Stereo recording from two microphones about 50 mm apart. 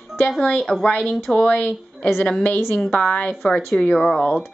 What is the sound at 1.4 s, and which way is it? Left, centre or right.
Speech, left.